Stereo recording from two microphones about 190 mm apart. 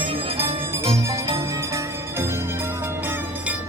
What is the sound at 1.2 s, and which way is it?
Music, 15° right (ahead or behind).